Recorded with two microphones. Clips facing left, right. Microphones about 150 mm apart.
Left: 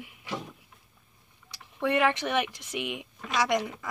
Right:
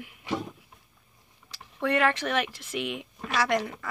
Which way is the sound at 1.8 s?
20° left (ahead or behind).